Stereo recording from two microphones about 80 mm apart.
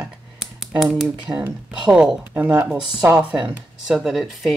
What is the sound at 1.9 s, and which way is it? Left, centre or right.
Speech, centre.